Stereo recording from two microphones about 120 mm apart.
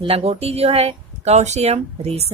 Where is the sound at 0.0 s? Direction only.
55° right (ahead or behind).